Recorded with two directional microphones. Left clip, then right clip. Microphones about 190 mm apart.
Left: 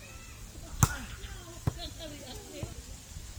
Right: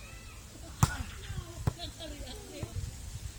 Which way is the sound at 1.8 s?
50° right (ahead or behind).